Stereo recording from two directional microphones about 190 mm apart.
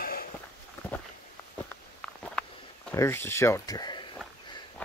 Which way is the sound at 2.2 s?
5° left (ahead or behind).